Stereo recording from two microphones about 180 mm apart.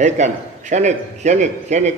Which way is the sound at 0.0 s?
40° right (ahead or behind).